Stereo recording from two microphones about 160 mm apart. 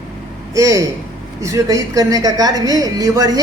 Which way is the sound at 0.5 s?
20° right (ahead or behind).